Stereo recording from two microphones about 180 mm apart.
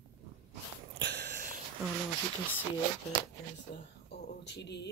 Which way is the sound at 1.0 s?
70° right (ahead or behind).